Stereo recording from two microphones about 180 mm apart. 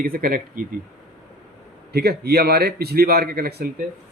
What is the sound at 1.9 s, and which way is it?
Speech, 60° right (ahead or behind).